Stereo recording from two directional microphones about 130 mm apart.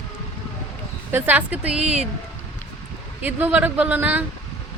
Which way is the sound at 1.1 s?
15° right (ahead or behind).